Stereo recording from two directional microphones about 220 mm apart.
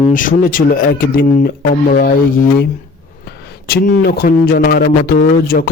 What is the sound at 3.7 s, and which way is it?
A man's voice, 45° left (ahead or behind).